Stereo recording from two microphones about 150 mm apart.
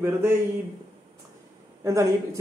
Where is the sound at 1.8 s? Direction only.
20° right (ahead or behind).